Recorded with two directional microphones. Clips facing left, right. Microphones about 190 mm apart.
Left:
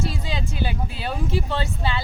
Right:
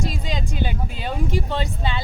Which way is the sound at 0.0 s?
15° right (ahead or behind).